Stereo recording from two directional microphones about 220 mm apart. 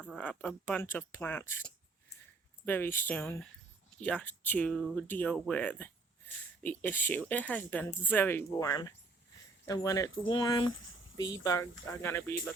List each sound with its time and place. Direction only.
0.0 s speech: 5° left (ahead or behind)
2.6 s speech: 10° left (ahead or behind)
11.2 s speech: 60° left (ahead or behind)
11.4 s speech: 15° left (ahead or behind)